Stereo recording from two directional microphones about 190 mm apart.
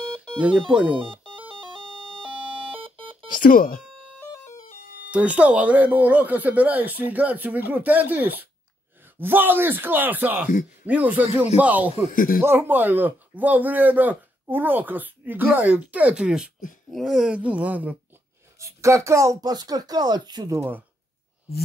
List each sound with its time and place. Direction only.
0.4 s speech: 5° right (ahead or behind)
0.9 s speech: 30° right (ahead or behind)
1.8 s music: 5° left (ahead or behind)
2.2 s alarm clock: 30° right (ahead or behind)
3.3 s speech: 45° left (ahead or behind)
4.3 s a sound: 15° left (ahead or behind)
4.6 s a sound: 55° left (ahead or behind)
5.1 s speech: 5° right (ahead or behind)
12.1 s speech: 45° left (ahead or behind)
12.4 s speech: 10° right (ahead or behind)